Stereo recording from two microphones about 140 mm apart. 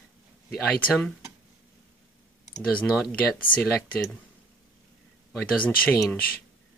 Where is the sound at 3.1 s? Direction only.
10° left (ahead or behind).